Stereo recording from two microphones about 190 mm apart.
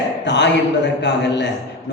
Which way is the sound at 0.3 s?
65° left (ahead or behind).